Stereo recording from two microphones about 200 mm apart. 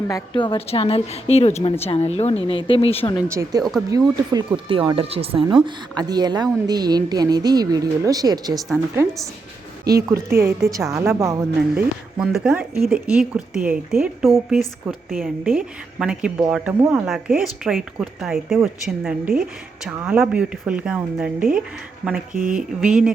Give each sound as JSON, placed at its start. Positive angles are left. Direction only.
{"t": 0.1, "sound": "a woman's voice", "side_deg": 25}
{"t": 3.2, "sound": "speech", "side_deg": -15}
{"t": 3.6, "sound": "speech", "side_deg": 0}
{"t": 3.8, "sound": "speech", "side_deg": -20}
{"t": 22.3, "sound": "speech", "side_deg": -40}
{"t": 22.8, "sound": "speech", "side_deg": -5}